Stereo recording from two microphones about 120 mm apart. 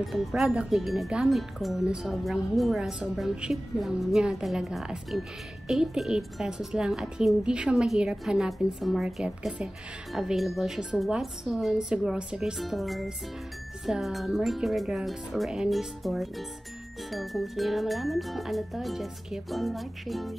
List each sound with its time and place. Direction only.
0.0 s speech: centre (ahead or behind)